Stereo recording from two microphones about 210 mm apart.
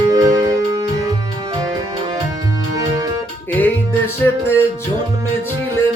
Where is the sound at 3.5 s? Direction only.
10° left (ahead or behind).